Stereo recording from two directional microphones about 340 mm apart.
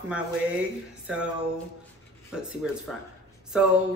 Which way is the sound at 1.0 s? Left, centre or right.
Centre.